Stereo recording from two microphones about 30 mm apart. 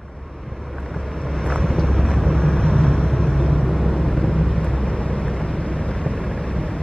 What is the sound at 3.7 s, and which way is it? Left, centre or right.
Vehicle, centre.